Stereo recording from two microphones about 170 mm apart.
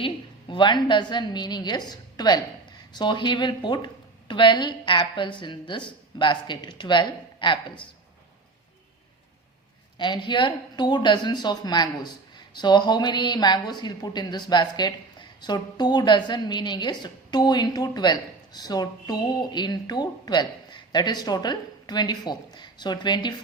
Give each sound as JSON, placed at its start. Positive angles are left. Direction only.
{"t": 0.0, "sound": "a woman's voice", "side_deg": 30}
{"t": 10.0, "sound": "speech", "side_deg": 25}